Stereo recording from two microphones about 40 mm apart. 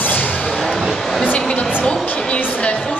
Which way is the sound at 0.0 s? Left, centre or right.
Left.